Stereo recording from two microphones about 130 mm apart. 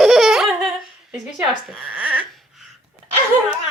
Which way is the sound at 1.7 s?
10° right (ahead or behind).